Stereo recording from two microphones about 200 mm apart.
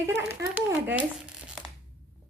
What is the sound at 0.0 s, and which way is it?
Speech, 15° right (ahead or behind).